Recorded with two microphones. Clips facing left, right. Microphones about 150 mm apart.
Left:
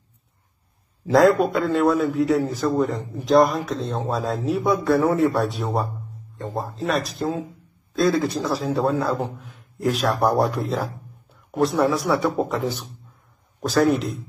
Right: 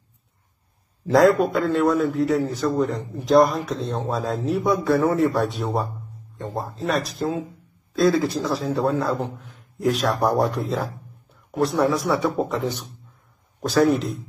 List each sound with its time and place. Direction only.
1.0 s a man's voice: centre (ahead or behind)